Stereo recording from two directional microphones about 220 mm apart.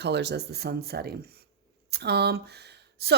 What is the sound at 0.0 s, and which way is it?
Speech, 50° right (ahead or behind).